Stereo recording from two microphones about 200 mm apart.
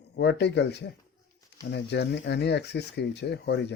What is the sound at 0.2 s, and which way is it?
Speech, 60° left (ahead or behind).